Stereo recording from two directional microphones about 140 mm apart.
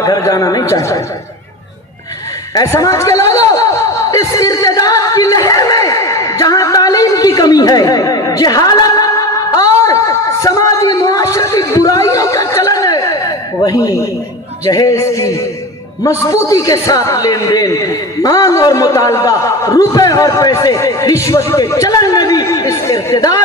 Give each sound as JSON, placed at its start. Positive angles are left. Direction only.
{"t": 0.0, "sound": "a man's voice", "side_deg": 25}
{"t": 2.5, "sound": "a sound", "side_deg": 25}
{"t": 14.6, "sound": "a man's voice", "side_deg": 25}